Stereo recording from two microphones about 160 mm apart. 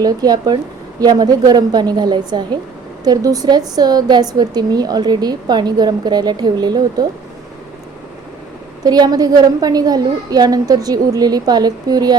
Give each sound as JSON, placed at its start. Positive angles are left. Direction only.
{"t": 0.0, "sound": "a woman's voice", "side_deg": -25}
{"t": 8.8, "sound": "a woman's voice", "side_deg": -25}